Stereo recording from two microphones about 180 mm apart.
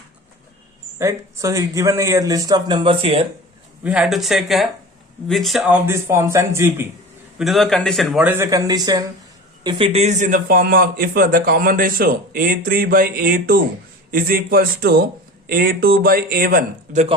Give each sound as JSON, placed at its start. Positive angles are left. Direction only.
{"t": 0.9, "sound": "a man's voice", "side_deg": -15}
{"t": 3.8, "sound": "speech", "side_deg": -5}
{"t": 7.3, "sound": "a man's voice", "side_deg": 0}